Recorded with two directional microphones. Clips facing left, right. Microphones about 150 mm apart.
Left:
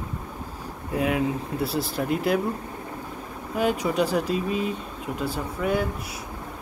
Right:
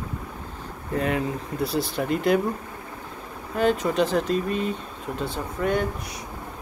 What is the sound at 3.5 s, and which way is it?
Speech, 10° left (ahead or behind).